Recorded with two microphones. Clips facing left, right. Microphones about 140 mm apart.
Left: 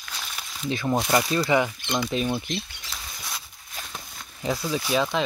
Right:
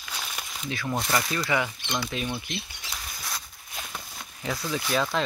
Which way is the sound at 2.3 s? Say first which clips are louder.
Left 6 dB; 40° left (ahead or behind).